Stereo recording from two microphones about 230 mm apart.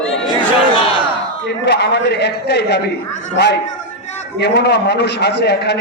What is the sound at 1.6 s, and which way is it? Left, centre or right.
A man's voice, left.